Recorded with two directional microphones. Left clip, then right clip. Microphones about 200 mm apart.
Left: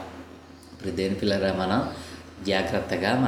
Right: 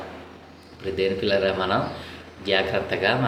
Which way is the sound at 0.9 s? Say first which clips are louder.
Right 4 dB; 55° left (ahead or behind).